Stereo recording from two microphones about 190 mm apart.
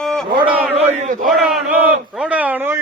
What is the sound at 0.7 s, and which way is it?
Speech, 35° right (ahead or behind).